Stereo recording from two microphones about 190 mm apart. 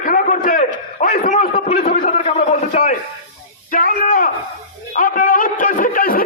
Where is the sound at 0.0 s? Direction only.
45° left (ahead or behind).